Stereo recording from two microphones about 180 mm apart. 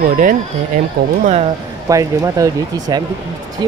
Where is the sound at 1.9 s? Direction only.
20° right (ahead or behind).